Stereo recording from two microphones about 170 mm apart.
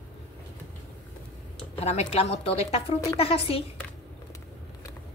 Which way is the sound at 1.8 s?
35° left (ahead or behind).